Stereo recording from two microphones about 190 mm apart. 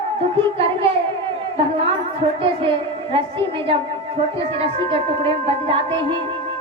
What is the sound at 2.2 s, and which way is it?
A woman's voice, 25° right (ahead or behind).